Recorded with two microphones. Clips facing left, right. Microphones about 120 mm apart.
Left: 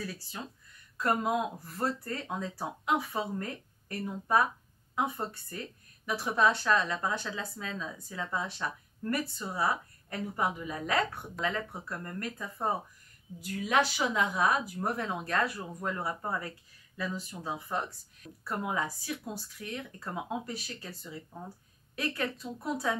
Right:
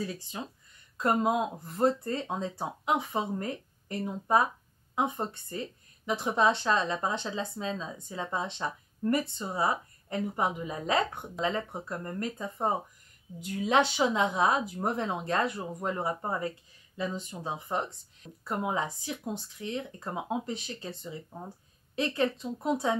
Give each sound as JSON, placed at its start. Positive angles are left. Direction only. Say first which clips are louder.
{"t": 0.0, "sound": "speech", "louder": "right 4 dB", "side_deg": -20}